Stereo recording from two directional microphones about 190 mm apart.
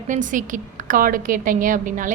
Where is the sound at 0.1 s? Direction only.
45° right (ahead or behind).